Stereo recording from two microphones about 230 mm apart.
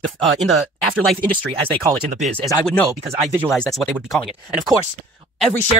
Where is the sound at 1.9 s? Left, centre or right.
Right.